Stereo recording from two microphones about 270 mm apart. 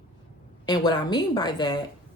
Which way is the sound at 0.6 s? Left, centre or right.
Centre.